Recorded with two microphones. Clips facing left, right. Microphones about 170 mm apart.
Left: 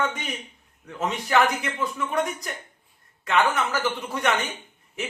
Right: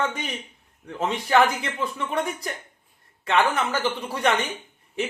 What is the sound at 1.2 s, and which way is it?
Speech, 30° right (ahead or behind).